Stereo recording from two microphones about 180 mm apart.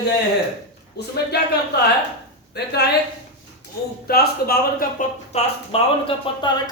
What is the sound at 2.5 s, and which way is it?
Speech, 60° left (ahead or behind).